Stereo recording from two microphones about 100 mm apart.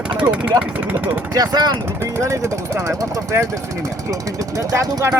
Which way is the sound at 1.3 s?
40° right (ahead or behind).